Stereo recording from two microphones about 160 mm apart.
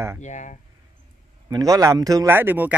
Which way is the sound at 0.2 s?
50° left (ahead or behind).